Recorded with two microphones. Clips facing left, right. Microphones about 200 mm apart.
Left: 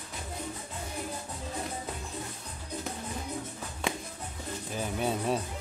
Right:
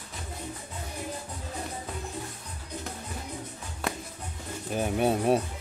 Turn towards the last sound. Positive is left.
turn(degrees=-60)  # may be behind; listen again after turning